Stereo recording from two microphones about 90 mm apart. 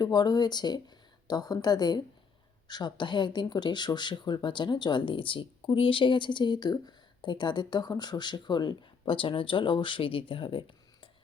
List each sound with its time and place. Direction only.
0.0 s a woman's voice: 50° left (ahead or behind); by 11.1 s 70° left (ahead or behind)